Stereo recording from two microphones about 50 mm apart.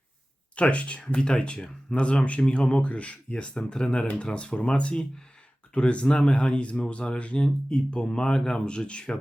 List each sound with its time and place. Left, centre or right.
0.5 s speech: left